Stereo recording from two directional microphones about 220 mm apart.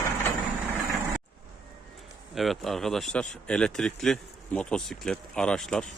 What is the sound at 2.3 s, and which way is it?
Speech, centre (ahead or behind).